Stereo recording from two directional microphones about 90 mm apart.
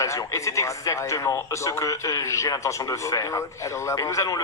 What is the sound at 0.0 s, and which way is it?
Speech, 35° left (ahead or behind).